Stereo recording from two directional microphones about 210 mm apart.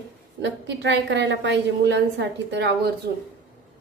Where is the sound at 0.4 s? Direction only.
60° right (ahead or behind).